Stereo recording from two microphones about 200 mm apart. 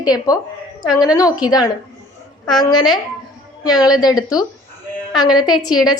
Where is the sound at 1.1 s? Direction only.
20° left (ahead or behind).